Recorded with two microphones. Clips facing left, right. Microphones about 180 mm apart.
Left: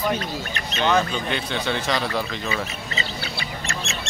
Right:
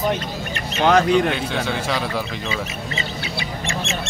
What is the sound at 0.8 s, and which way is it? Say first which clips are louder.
Speech: right 6 dB; 90° right.